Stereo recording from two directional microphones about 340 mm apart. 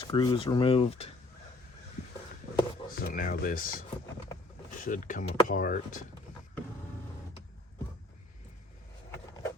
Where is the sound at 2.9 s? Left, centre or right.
Left.